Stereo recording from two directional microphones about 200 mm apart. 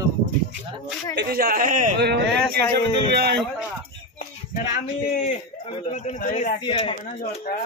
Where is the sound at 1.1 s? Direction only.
50° right (ahead or behind).